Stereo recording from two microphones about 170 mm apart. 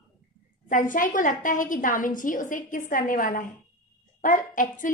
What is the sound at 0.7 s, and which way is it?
A woman's voice, 50° left (ahead or behind).